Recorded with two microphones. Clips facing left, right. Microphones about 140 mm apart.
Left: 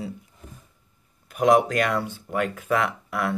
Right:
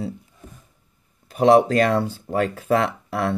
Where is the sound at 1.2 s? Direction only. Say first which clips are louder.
Right 4 dB; 30° right (ahead or behind).